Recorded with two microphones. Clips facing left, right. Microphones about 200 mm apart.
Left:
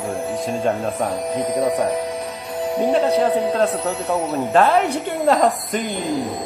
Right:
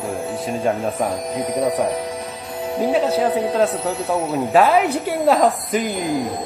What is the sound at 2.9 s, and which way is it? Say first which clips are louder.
Speech: left 1 dB; centre (ahead or behind).